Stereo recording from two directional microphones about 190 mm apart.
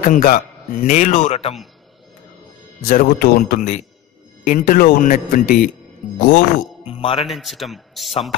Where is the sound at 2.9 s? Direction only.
50° left (ahead or behind).